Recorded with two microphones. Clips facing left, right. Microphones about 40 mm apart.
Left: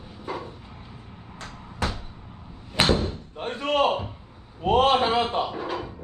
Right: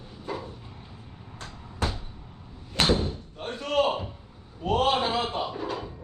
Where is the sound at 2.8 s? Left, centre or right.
Centre.